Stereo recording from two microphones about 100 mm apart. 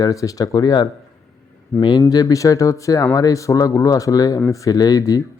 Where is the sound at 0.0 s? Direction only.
35° left (ahead or behind).